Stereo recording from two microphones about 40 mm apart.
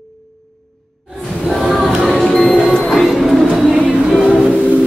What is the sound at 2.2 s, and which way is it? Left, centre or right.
Music, centre.